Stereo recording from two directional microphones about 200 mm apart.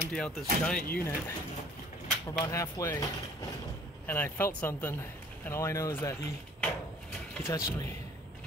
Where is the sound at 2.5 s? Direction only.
15° left (ahead or behind).